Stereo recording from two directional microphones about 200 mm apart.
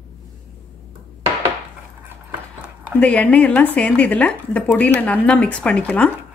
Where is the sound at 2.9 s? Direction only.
5° left (ahead or behind).